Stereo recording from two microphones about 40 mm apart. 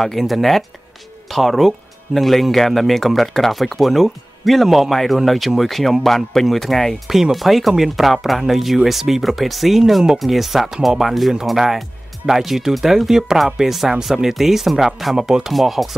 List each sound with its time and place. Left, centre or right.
0.0 s speech: centre
7.1 s speech: centre